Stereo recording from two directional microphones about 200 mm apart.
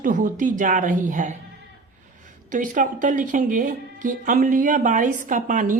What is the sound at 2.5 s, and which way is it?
A woman's voice, 40° right (ahead or behind).